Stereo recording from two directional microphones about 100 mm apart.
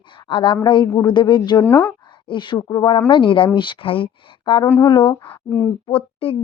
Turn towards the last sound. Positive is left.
turn(degrees=70)  # may be behind; listen again after turning